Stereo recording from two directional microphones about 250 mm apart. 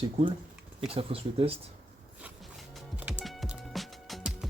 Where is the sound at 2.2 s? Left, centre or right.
Centre.